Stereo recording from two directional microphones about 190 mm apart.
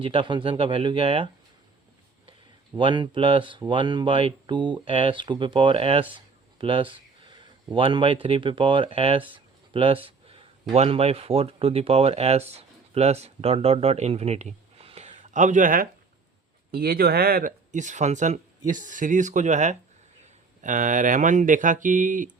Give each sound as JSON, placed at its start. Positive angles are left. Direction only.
{"t": 0.0, "sound": "speech", "side_deg": -25}
{"t": 2.7, "sound": "speech", "side_deg": -25}